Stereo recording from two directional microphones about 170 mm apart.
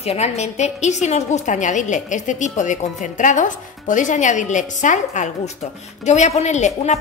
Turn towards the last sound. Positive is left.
turn(degrees=40)  # may be behind; listen again after turning